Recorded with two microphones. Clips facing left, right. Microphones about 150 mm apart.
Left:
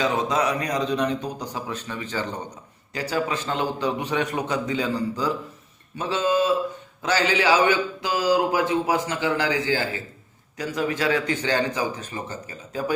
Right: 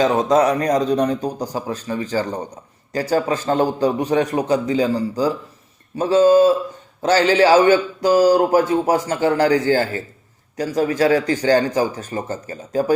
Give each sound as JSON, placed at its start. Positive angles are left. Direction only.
{"t": 0.0, "sound": "a man's voice", "side_deg": -45}